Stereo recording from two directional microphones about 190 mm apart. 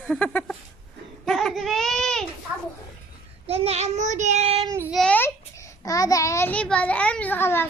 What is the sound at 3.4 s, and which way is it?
Child singing, 30° right (ahead or behind).